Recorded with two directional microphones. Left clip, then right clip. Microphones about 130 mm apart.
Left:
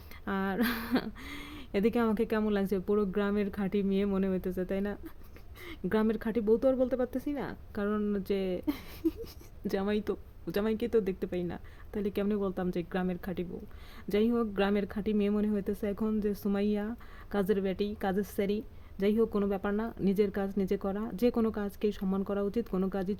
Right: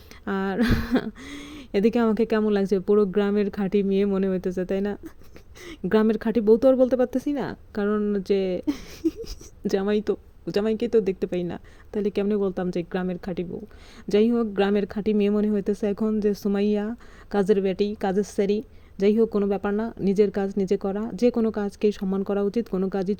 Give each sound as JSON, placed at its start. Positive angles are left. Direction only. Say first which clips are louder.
{"t": 0.3, "sound": "speech", "louder": "right 7 dB", "side_deg": -40}